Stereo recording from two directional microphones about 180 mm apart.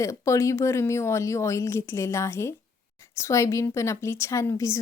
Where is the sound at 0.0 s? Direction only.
15° left (ahead or behind).